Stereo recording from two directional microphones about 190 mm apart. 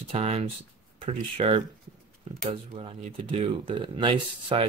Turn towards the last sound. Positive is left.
turn(degrees=-25)  # may be behind; listen again after turning